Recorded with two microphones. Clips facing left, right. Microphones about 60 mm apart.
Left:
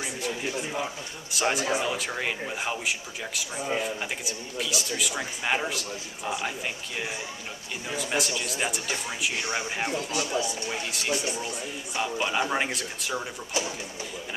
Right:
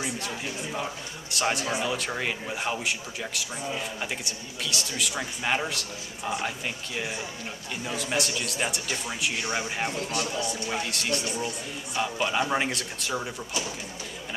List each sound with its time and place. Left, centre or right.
1.3 s a man's voice: centre
7.8 s a man's voice: centre
10.0 s speech: right
10.9 s a man's voice: centre
13.5 s speech: left